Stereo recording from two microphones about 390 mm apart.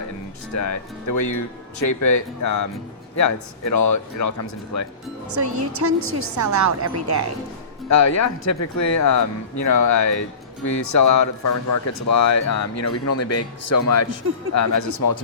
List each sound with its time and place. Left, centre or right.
0.5 s speech: left
5.3 s a woman's voice: right
7.9 s speech: left